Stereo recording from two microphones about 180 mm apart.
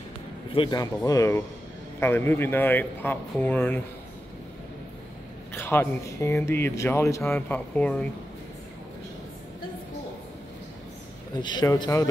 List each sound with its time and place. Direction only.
0.6 s speech: 20° left (ahead or behind)
5.5 s speech: 10° left (ahead or behind)
11.3 s speech: 25° left (ahead or behind)